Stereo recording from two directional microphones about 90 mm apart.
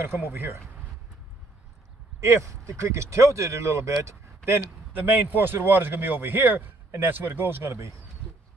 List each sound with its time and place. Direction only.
0.0 s a man's voice: 25° right (ahead or behind)
2.1 s a man's voice: 35° right (ahead or behind)